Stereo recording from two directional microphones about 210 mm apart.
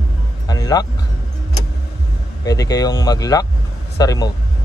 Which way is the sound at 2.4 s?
15° left (ahead or behind).